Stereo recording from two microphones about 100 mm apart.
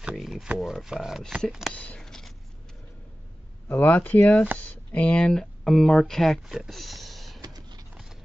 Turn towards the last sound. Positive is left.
turn(degrees=-40)  # may be behind; listen again after turning